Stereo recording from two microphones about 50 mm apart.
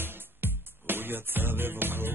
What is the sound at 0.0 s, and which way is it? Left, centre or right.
Music, right.